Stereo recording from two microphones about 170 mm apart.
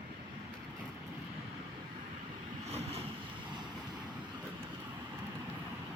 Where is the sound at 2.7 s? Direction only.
35° right (ahead or behind).